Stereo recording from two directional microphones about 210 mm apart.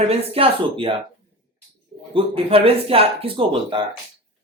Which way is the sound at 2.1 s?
25° right (ahead or behind).